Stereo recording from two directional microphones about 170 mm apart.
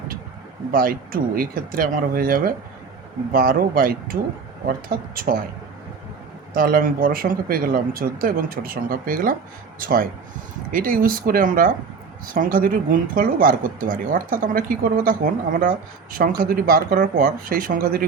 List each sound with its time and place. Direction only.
0.7 s speech: 55° right (ahead or behind)
6.5 s speech: 55° right (ahead or behind)